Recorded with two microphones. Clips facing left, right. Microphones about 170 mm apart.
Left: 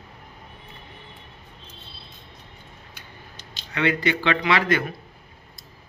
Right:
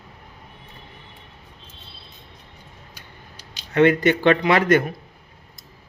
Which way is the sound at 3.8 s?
50° right (ahead or behind).